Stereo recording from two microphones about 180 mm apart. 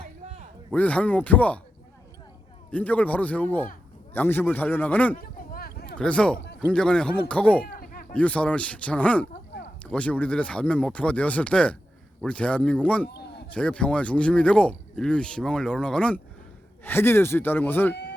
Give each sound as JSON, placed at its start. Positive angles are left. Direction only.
{"t": 0.7, "sound": "speech", "side_deg": 5}
{"t": 2.6, "sound": "speech", "side_deg": 10}
{"t": 5.1, "sound": "a sound", "side_deg": 55}
{"t": 6.0, "sound": "speech", "side_deg": 5}
{"t": 7.6, "sound": "a sound", "side_deg": 55}
{"t": 8.1, "sound": "speech", "side_deg": 5}